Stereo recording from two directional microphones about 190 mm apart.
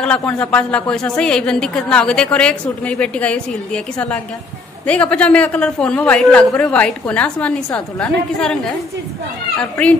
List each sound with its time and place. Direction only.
0.0 s a woman's voice: 5° left (ahead or behind)